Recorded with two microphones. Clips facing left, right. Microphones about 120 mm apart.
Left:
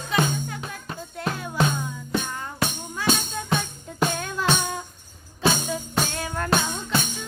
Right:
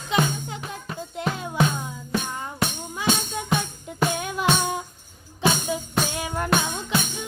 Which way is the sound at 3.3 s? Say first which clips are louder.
Right 1 dB; 20° right (ahead or behind).